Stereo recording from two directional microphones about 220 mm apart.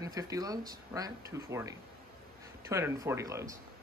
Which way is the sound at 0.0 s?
15° right (ahead or behind).